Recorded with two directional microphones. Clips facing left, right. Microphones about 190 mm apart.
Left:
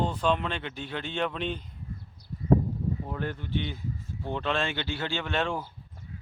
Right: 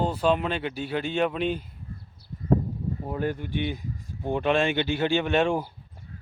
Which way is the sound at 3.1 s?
10° right (ahead or behind).